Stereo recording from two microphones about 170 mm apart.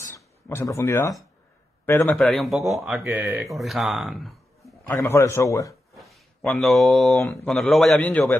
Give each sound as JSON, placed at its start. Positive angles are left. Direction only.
{"t": 0.1, "sound": "a man's voice", "side_deg": 15}
{"t": 2.1, "sound": "a man's voice", "side_deg": 0}
{"t": 4.8, "sound": "a man's voice", "side_deg": 15}
{"t": 5.9, "sound": "a sound", "side_deg": 0}
{"t": 7.4, "sound": "a man's voice", "side_deg": 0}